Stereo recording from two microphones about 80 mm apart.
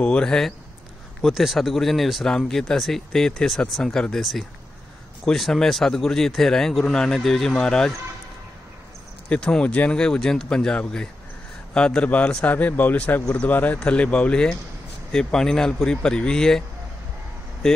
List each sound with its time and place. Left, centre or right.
0.0 s speech: centre
9.3 s speech: centre
17.6 s speech: centre